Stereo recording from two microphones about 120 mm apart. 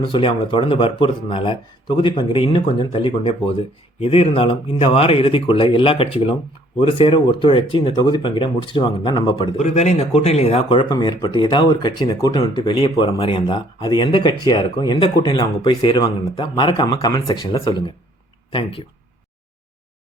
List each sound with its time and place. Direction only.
0.0 s speech: 45° left (ahead or behind)
9.6 s a man's voice: 70° left (ahead or behind); by 10.9 s 50° left (ahead or behind)
10.9 s speech: 40° left (ahead or behind)
13.1 s speech: 45° left (ahead or behind)